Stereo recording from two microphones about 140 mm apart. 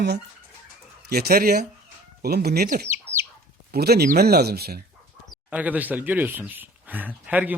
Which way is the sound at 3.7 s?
90° right.